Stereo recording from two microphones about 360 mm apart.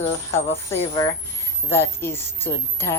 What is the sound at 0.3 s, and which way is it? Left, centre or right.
Speech, centre.